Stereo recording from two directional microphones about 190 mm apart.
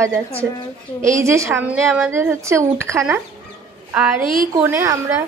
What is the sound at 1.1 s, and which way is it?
Speech, 15° right (ahead or behind).